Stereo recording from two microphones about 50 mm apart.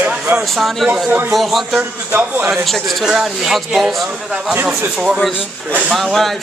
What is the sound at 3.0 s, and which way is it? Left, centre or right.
A man's voice, centre.